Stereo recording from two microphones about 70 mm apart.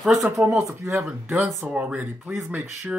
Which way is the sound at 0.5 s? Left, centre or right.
Right.